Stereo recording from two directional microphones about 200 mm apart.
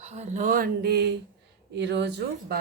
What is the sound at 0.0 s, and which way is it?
Speech, 35° right (ahead or behind).